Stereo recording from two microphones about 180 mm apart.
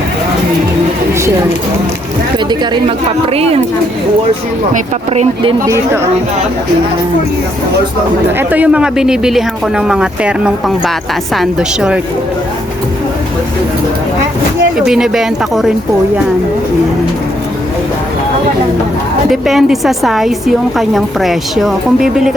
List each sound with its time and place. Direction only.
3.3 s speech: 35° right (ahead or behind)
5.1 s speech: 35° right (ahead or behind)
5.6 s speech: 15° right (ahead or behind)
8.4 s speech: 10° right (ahead or behind)
14.8 s speech: centre (ahead or behind)
19.3 s speech: centre (ahead or behind)